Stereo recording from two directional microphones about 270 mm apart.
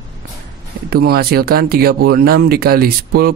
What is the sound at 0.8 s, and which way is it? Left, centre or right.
Speech, right.